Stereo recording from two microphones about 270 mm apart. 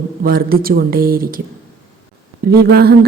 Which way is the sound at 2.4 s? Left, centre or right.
Right.